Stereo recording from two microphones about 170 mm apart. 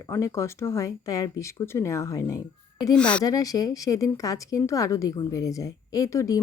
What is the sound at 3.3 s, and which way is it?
Speech, 20° left (ahead or behind).